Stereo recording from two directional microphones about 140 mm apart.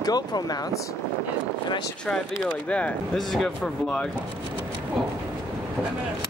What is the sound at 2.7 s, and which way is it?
Speech, 10° left (ahead or behind).